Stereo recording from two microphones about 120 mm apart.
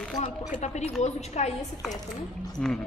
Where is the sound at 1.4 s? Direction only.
70° left (ahead or behind).